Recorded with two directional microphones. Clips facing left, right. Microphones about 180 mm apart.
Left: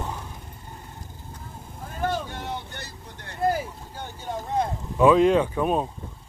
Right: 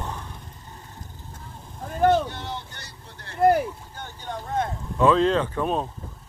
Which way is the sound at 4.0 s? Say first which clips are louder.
Left 3 dB; centre (ahead or behind).